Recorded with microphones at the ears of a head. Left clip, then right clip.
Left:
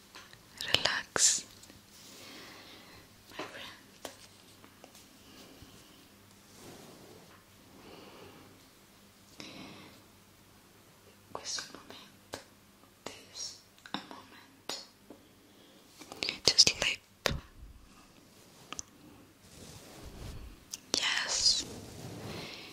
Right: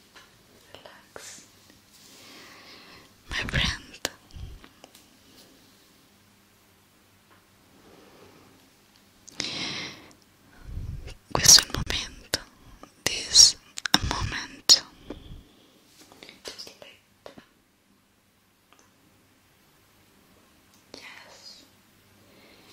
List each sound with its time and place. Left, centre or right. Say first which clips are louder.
0.6 s whispering: left 19 dB; left
2.9 s whispering: right 16 dB; right
9.2 s a sound: right 16 dB; right
10.7 s whispering: right 10 dB; right
16.2 s whispering: left 16 dB; left
19.6 s whispering: left 9 dB; left